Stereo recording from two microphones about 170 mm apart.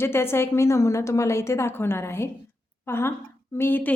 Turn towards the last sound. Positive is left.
turn(degrees=10)  # may be behind; listen again after turning